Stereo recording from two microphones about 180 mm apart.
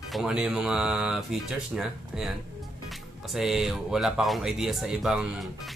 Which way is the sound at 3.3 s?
Centre (ahead or behind).